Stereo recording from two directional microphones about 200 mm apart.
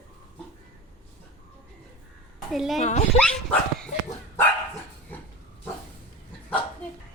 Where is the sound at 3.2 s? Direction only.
5° left (ahead or behind).